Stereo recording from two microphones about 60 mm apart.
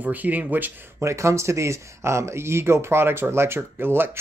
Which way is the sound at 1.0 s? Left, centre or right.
Right.